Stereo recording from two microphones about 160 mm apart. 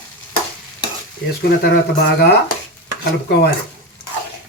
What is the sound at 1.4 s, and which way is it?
Speech, 90° left.